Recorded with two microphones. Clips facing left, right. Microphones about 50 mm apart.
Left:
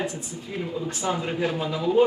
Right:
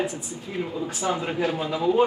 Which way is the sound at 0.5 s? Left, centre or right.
Centre.